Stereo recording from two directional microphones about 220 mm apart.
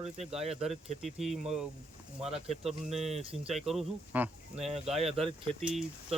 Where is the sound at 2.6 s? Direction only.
Centre (ahead or behind).